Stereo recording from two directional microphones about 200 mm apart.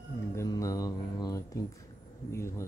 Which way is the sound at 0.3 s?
15° left (ahead or behind).